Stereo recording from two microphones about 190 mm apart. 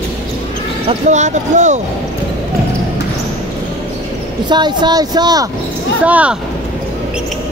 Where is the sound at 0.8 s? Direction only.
40° right (ahead or behind).